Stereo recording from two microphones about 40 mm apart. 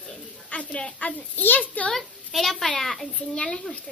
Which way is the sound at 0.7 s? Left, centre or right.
Centre.